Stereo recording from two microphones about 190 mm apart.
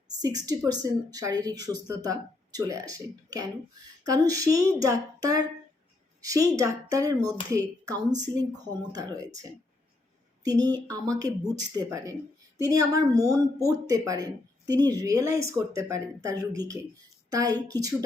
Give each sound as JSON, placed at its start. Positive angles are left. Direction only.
{"t": 0.2, "sound": "speech", "side_deg": -20}